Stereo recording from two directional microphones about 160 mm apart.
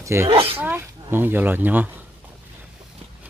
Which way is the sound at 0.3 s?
35° right (ahead or behind).